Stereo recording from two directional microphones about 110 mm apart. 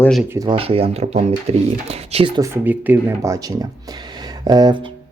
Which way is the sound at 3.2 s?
30° right (ahead or behind).